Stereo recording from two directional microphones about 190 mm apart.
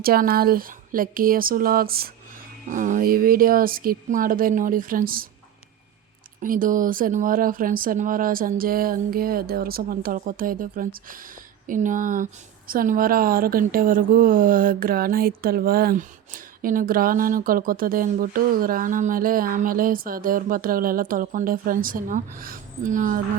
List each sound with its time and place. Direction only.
0.0 s speech: 50° right (ahead or behind)
6.4 s speech: 45° right (ahead or behind)